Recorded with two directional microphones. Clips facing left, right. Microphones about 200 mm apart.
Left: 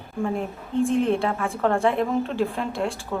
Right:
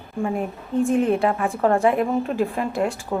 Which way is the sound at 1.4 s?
15° right (ahead or behind).